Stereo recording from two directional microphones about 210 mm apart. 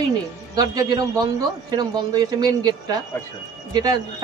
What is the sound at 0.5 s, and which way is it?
Speech, 20° right (ahead or behind).